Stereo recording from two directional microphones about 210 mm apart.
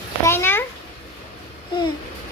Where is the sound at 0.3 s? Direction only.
10° left (ahead or behind).